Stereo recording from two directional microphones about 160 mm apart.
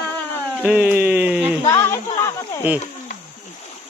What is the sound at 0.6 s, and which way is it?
Speech, 10° right (ahead or behind).